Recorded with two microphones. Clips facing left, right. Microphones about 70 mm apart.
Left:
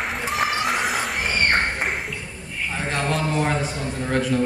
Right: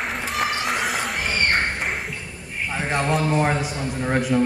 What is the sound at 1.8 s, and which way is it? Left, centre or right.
Music, centre.